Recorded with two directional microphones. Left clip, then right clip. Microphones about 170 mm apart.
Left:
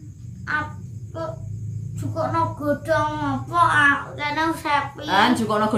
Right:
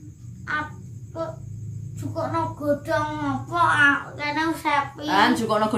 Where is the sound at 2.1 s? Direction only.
5° left (ahead or behind).